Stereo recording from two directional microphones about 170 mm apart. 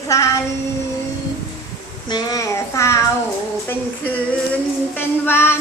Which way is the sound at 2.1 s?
25° left (ahead or behind).